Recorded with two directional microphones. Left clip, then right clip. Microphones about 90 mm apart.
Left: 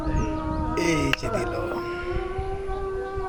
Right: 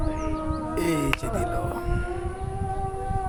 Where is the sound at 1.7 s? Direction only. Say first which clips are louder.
Left 2 dB; 40° right (ahead or behind).